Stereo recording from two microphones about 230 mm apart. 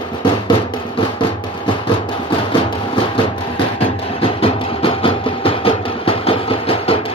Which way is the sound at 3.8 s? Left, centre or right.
Left.